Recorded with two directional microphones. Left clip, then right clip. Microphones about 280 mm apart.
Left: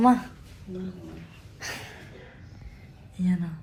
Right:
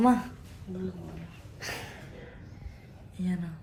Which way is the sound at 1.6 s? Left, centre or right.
Centre.